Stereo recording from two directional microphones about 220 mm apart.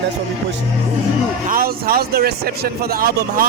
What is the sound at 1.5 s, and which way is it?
Speech, 45° right (ahead or behind).